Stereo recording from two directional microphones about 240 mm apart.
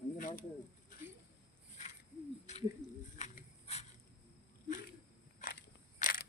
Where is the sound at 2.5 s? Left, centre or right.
Left.